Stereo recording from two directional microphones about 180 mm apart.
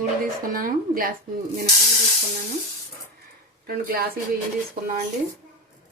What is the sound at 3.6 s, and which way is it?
Speech, 55° right (ahead or behind).